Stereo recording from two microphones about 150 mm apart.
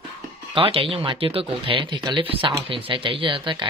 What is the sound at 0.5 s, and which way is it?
Speech, 35° right (ahead or behind).